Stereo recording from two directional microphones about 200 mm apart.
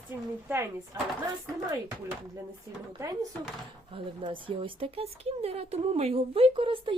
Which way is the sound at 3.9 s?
25° right (ahead or behind).